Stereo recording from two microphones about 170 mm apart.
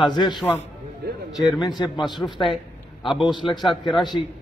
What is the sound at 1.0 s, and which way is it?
Speech, 65° right (ahead or behind).